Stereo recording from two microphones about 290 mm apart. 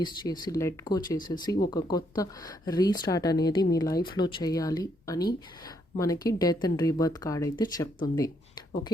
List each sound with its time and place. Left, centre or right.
0.0 s speech: centre